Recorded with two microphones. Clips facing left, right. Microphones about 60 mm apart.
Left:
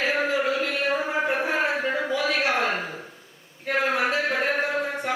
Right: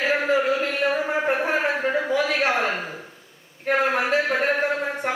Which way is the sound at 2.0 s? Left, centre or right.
Right.